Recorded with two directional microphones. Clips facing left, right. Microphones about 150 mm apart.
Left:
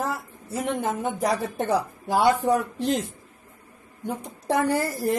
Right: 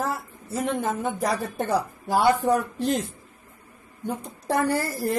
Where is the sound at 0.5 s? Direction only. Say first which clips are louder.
Even; 15° left (ahead or behind).